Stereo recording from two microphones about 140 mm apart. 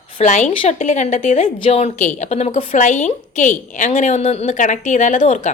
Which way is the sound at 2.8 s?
60° left (ahead or behind).